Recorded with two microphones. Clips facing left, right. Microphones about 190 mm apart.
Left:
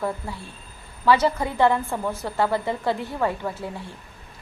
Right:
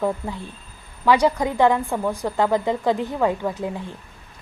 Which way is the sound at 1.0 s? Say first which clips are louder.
Right 2 dB; 15° right (ahead or behind).